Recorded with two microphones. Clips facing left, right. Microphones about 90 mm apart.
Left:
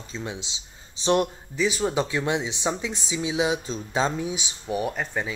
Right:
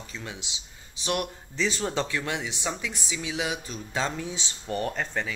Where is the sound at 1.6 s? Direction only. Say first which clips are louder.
Left 4 dB; 5° left (ahead or behind).